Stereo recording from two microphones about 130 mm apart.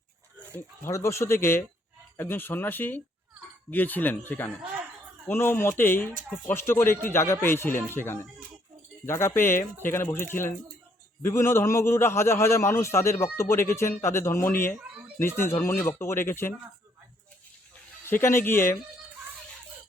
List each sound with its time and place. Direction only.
0.5 s a man's voice: 20° left (ahead or behind)
18.0 s a man's voice: 20° left (ahead or behind)